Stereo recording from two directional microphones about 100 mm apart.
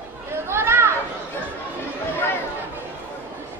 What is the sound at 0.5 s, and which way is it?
Children playing, 25° right (ahead or behind).